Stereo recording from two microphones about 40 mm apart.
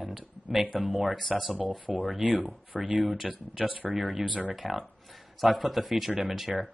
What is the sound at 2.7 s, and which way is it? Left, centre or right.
Speech, centre.